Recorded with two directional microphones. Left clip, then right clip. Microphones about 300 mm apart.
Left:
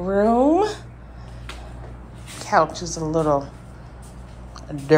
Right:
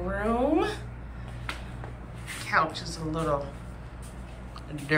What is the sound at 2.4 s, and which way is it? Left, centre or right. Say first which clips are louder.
A woman's voice: left 7 dB; centre.